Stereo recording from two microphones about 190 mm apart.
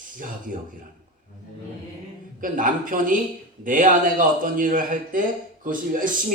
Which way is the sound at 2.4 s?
45° right (ahead or behind).